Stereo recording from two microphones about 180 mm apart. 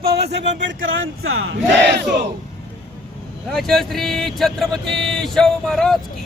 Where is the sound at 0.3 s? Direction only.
75° right (ahead or behind).